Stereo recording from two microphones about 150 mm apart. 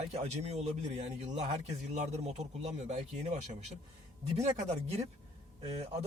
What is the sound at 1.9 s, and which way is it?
Speech, 50° right (ahead or behind).